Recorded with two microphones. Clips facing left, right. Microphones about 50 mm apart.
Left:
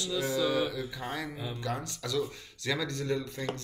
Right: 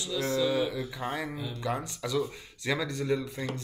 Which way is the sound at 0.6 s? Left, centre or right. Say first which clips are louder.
Right 1 dB; centre.